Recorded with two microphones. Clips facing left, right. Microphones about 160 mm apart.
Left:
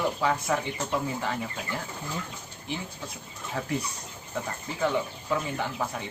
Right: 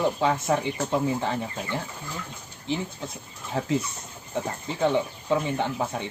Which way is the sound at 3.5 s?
30° right (ahead or behind).